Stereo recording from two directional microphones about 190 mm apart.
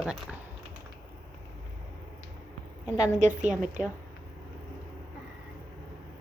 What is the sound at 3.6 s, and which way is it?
Speech, 5° right (ahead or behind).